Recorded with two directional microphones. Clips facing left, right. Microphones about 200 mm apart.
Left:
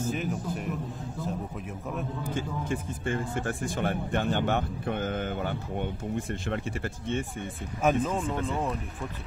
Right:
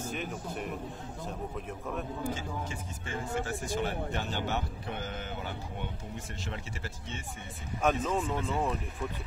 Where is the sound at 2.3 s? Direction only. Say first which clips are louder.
Left 5 dB; 55° left (ahead or behind).